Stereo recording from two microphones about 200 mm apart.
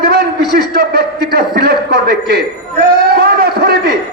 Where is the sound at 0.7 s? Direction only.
50° right (ahead or behind).